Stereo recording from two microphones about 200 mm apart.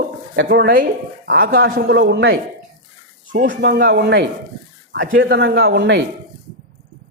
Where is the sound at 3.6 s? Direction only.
55° right (ahead or behind).